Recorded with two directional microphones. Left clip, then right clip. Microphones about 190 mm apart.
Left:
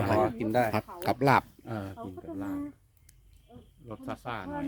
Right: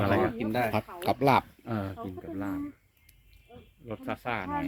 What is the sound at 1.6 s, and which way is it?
Speech, 40° right (ahead or behind).